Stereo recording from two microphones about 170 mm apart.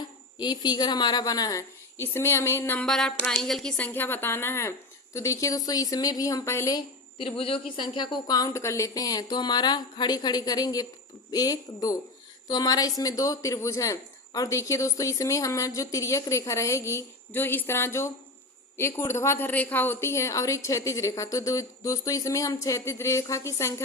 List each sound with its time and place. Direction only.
0.3 s speech: 25° left (ahead or behind)
2.8 s a woman's voice: centre (ahead or behind)